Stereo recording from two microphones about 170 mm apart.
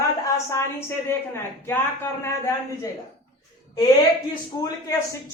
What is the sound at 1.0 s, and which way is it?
Speech, 15° left (ahead or behind).